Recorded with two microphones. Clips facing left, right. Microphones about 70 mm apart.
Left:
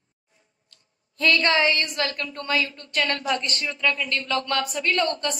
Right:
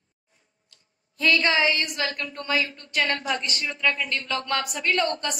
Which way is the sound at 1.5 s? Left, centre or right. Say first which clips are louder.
Left 1 dB; left.